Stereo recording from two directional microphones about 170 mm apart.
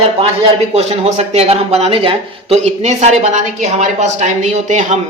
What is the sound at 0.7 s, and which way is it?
Speech, 40° right (ahead or behind).